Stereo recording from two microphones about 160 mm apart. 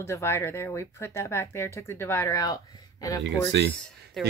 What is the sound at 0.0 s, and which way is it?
Speech, 15° left (ahead or behind).